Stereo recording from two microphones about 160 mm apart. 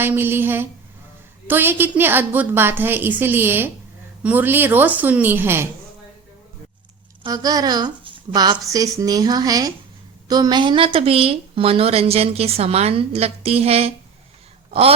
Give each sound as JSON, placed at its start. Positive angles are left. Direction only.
{"t": 0.0, "sound": "a woman's voice", "side_deg": -15}
{"t": 7.2, "sound": "a woman's voice", "side_deg": -25}